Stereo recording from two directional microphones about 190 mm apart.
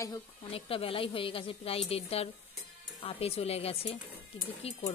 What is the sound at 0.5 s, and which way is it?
A woman's voice, 30° left (ahead or behind).